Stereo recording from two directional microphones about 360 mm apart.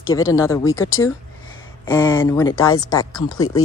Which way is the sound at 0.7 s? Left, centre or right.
Left.